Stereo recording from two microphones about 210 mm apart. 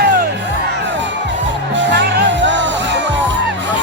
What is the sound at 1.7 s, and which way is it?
Music, 55° right (ahead or behind).